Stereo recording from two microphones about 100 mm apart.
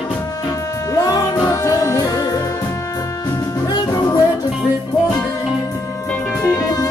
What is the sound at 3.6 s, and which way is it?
Music, 40° left (ahead or behind).